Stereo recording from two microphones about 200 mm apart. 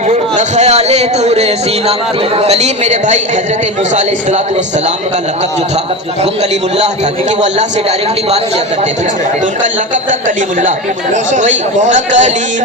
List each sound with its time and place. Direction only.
0.1 s speech: 35° right (ahead or behind)
6.5 s speech: 35° right (ahead or behind)
9.9 s speech: 40° right (ahead or behind)